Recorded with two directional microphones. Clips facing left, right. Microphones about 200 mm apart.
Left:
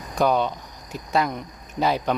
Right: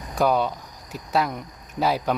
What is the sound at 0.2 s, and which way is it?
Speech, 5° right (ahead or behind).